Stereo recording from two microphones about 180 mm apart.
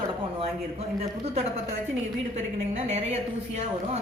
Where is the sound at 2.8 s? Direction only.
35° right (ahead or behind).